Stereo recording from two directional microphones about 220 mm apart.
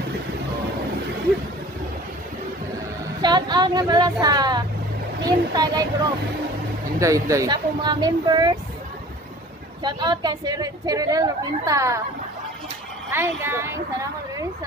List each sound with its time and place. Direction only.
3.2 s a woman's voice: 20° right (ahead or behind)
7.0 s speech: 15° right (ahead or behind)
9.8 s a woman's voice: 20° right (ahead or behind)
13.1 s a woman's voice: 10° right (ahead or behind)